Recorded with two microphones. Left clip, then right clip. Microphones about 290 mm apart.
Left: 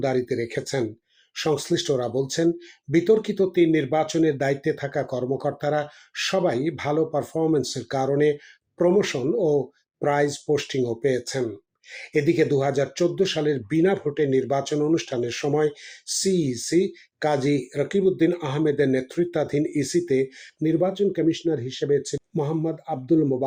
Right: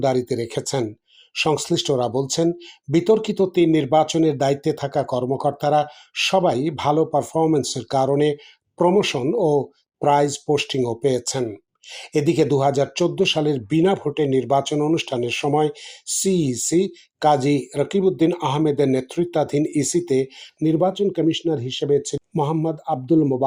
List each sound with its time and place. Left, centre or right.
0.0 s speech: centre
12.2 s speech: centre